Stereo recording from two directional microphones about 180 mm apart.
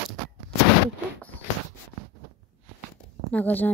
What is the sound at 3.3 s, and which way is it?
Speech, 10° left (ahead or behind).